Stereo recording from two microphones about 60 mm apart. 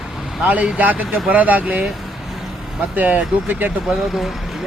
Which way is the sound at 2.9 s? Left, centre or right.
Right.